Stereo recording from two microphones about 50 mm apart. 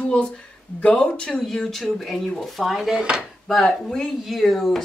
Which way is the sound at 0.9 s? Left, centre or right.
Left.